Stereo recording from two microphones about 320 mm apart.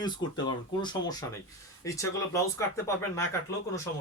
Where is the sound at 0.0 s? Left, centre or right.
Centre.